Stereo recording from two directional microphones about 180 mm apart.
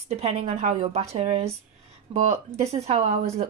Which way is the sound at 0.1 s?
35° right (ahead or behind).